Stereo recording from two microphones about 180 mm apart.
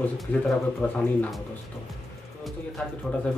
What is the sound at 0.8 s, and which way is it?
Speech, 5° left (ahead or behind).